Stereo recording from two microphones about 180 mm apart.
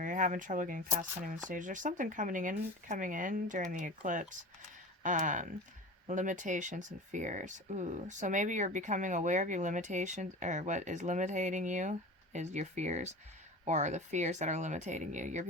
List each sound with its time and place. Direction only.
0.0 s speech: 45° right (ahead or behind)